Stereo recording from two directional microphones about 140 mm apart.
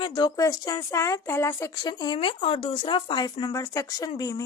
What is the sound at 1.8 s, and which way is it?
Speech, 30° left (ahead or behind).